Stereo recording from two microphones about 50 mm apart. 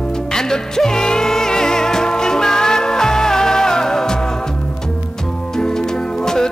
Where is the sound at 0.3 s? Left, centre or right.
Centre.